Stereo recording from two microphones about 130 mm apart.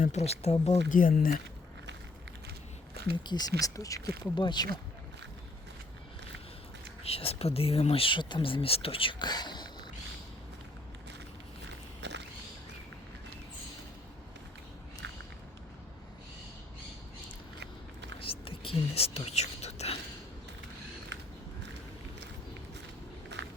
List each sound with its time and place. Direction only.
0.0 s speech: 60° left (ahead or behind)
0.9 s speech: 90° left
3.2 s speech: 30° left (ahead or behind)
7.0 s speech: 50° left (ahead or behind)
18.2 s whispering: 45° left (ahead or behind)